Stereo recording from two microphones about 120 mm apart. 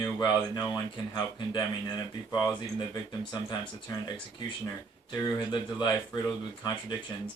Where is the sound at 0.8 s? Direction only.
40° left (ahead or behind).